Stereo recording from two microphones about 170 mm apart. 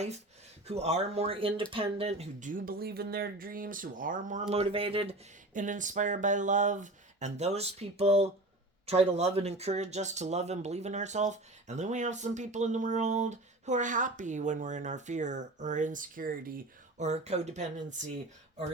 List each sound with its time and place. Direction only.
0.7 s speech: 40° right (ahead or behind)
5.5 s speech: 50° right (ahead or behind)
17.0 s speech: 40° right (ahead or behind)